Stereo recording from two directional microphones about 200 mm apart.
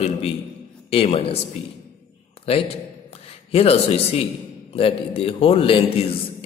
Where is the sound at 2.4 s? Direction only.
30° left (ahead or behind).